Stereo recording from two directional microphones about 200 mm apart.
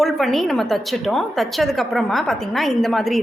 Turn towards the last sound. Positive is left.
turn(degrees=0)  # may be behind; listen again after turning